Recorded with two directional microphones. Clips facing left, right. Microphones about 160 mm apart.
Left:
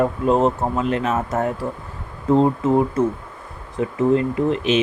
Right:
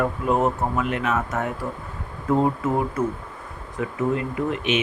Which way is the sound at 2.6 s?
25° left (ahead or behind).